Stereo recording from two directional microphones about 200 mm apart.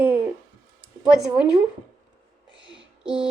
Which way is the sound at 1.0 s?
5° right (ahead or behind).